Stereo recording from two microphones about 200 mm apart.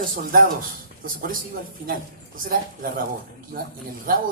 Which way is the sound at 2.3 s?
45° right (ahead or behind).